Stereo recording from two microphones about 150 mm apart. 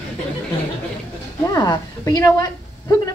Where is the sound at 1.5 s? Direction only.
25° left (ahead or behind).